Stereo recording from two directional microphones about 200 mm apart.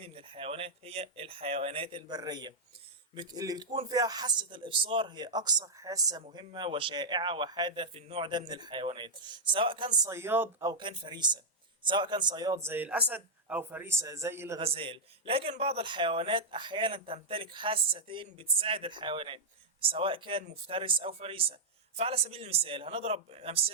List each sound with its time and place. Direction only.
0.0 s a man's voice: 25° right (ahead or behind)
10.0 s a man's voice: 15° right (ahead or behind)
14.6 s a man's voice: 25° right (ahead or behind)